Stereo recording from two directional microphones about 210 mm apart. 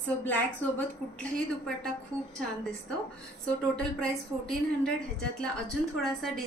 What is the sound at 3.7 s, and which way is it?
A woman's voice, 5° left (ahead or behind).